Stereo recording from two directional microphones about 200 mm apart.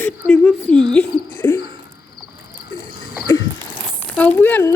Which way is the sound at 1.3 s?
15° left (ahead or behind).